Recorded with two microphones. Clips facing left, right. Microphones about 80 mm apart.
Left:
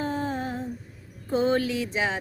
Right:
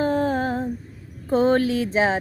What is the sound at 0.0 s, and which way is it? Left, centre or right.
Female singing, right.